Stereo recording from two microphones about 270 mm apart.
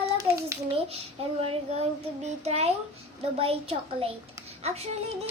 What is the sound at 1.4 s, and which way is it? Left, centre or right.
A child's voice, right.